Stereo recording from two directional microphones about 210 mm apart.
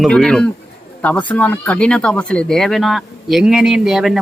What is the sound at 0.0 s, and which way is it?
Speech, 5° left (ahead or behind).